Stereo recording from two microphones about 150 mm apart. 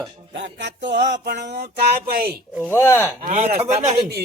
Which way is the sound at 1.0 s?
90° right.